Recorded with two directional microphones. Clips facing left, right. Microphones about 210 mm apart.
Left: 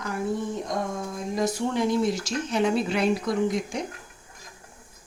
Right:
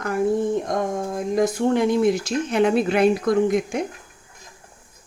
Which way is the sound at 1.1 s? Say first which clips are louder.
Right 6 dB; 55° right (ahead or behind).